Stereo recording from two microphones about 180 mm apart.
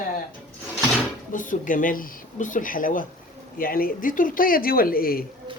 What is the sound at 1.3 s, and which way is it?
Speech, 45° left (ahead or behind).